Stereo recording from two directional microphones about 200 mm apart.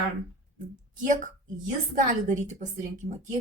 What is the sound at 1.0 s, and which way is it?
Speech, 40° right (ahead or behind).